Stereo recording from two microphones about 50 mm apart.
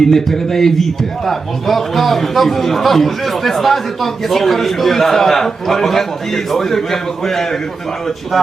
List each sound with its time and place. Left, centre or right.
0.1 s a man's voice: centre